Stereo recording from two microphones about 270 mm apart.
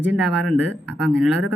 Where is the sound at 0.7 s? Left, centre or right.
Left.